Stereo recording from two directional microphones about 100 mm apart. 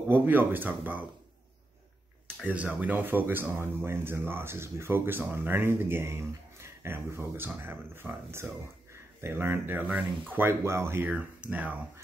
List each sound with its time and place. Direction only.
0.1 s speech: 20° right (ahead or behind)
2.4 s speech: 15° right (ahead or behind)
11.1 s speech: 15° right (ahead or behind)